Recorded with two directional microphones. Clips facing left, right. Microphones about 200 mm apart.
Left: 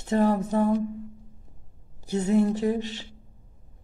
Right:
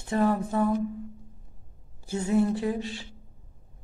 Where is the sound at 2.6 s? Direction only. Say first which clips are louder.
Left 3 dB; 25° left (ahead or behind).